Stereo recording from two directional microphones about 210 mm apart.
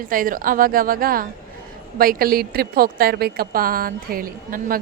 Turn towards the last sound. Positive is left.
turn(degrees=-45)  # may be behind; listen again after turning